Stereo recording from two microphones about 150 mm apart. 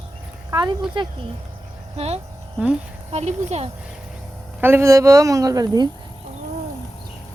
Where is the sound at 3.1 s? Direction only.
45° right (ahead or behind).